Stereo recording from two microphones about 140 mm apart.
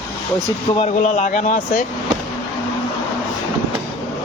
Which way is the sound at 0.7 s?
55° left (ahead or behind).